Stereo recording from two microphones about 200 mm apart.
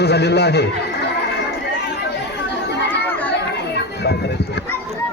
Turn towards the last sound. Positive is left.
turn(degrees=55)  # may be behind; listen again after turning